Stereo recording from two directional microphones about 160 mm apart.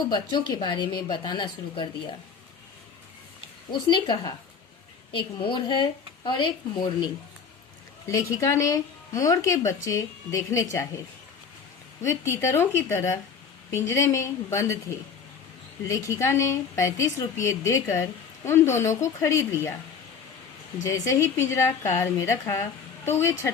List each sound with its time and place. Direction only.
0.1 s speech: 25° left (ahead or behind)
3.7 s a woman's voice: 30° left (ahead or behind)
12.0 s a woman's voice: 15° left (ahead or behind)
15.9 s a woman's voice: 20° left (ahead or behind)
20.8 s a woman's voice: 20° left (ahead or behind)